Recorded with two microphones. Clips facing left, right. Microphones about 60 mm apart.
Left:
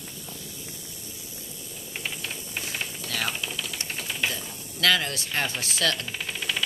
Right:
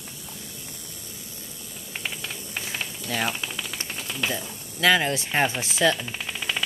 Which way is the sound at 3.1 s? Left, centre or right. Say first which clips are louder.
Right 4 dB; right.